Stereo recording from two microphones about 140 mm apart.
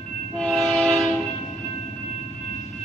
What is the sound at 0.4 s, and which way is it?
Train, 5° left (ahead or behind).